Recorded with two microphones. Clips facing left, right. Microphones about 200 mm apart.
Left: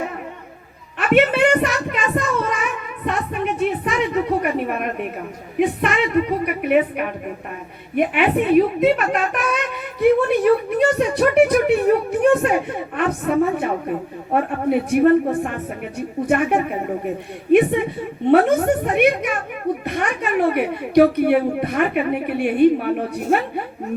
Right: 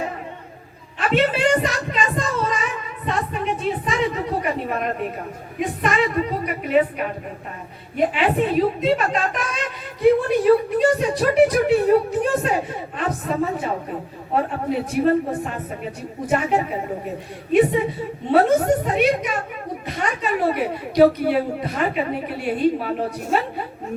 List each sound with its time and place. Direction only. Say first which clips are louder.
0.9 s a woman's voice: left 4 dB; 60° left (ahead or behind)